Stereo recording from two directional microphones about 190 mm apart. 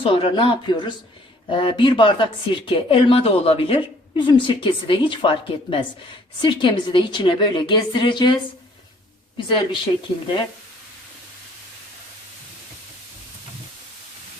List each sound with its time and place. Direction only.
0.0 s speech: 25° left (ahead or behind)
9.6 s speech: 25° left (ahead or behind)